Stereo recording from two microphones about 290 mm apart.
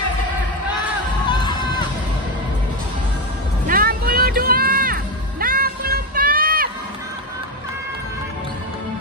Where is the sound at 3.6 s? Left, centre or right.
Right.